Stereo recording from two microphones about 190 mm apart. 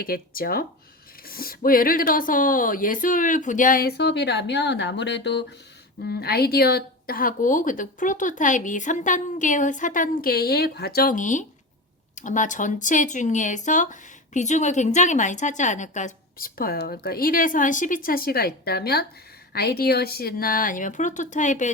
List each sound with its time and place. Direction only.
0.0 s speech: 50° left (ahead or behind)